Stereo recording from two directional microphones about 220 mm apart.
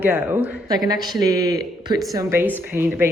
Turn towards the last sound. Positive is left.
turn(degrees=-10)  # may be behind; listen again after turning